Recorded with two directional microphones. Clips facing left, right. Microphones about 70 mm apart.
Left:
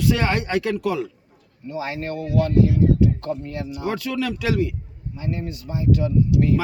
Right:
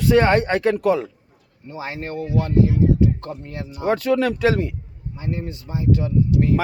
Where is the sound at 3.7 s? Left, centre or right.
Right.